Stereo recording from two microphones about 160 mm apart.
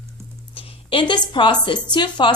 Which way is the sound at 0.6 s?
35° left (ahead or behind).